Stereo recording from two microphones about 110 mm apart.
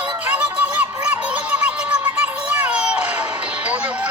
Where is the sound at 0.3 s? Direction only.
10° right (ahead or behind).